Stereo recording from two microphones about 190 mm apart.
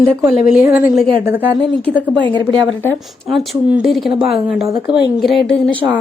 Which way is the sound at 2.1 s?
25° right (ahead or behind).